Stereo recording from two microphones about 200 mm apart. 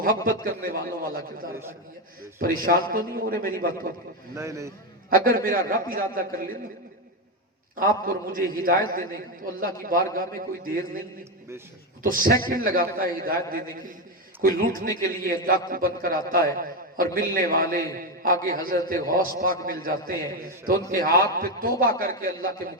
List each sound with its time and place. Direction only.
0.3 s a man's voice: 45° right (ahead or behind)
2.6 s a man's voice: 45° right (ahead or behind)
4.4 s a man's voice: 15° right (ahead or behind)
5.1 s a man's voice: 45° right (ahead or behind)
8.0 s a man's voice: 45° right (ahead or behind)
12.0 s a man's voice: 45° right (ahead or behind)